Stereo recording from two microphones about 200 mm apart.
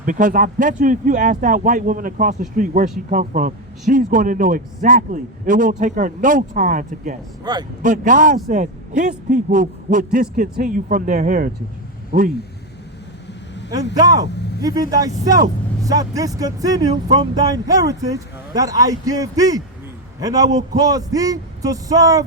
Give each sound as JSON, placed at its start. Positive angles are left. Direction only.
{"t": 0.0, "sound": "a man's voice", "side_deg": -40}
{"t": 7.5, "sound": "speech", "side_deg": -20}
{"t": 7.8, "sound": "a man's voice", "side_deg": -40}
{"t": 14.0, "sound": "speech", "side_deg": -20}